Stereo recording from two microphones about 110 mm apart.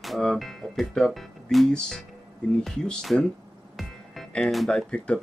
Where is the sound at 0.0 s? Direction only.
Centre (ahead or behind).